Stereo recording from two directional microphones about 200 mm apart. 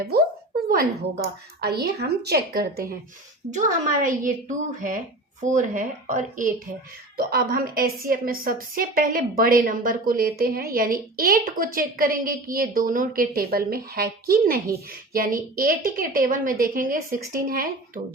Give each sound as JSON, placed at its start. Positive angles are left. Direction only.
{"t": 0.7, "sound": "a woman's voice", "side_deg": -45}
{"t": 3.5, "sound": "a woman's voice", "side_deg": -40}
{"t": 7.2, "sound": "a woman's voice", "side_deg": -50}